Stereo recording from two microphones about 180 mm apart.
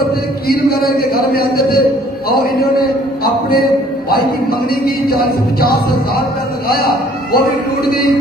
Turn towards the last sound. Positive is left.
turn(degrees=55)  # may be behind; listen again after turning